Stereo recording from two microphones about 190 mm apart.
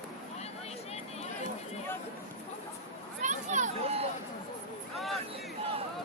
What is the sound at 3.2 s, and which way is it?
Speech, 40° right (ahead or behind).